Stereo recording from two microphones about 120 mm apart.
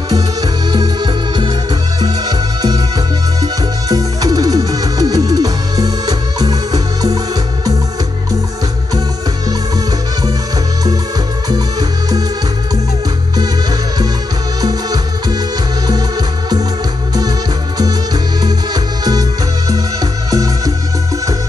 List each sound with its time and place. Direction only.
0.1 s music: 35° right (ahead or behind)
3.9 s music: 30° right (ahead or behind)
14.6 s music: 35° right (ahead or behind)
17.7 s music: 30° right (ahead or behind)